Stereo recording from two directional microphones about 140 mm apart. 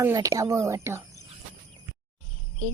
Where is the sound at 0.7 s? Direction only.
20° right (ahead or behind).